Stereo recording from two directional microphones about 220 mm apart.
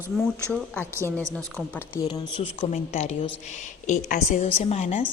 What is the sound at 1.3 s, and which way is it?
Speech, 5° left (ahead or behind).